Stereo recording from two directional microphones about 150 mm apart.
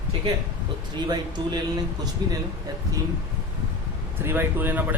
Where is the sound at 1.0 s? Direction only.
30° right (ahead or behind).